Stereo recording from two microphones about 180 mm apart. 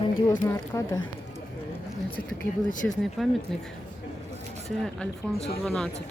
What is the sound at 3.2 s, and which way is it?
Speech, centre (ahead or behind).